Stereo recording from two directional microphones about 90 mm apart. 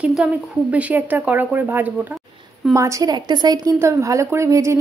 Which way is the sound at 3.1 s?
50° right (ahead or behind).